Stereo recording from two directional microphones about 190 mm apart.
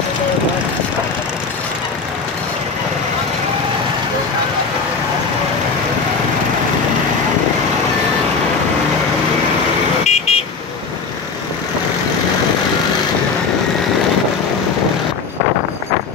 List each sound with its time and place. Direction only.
10.0 s vehicle: 35° left (ahead or behind)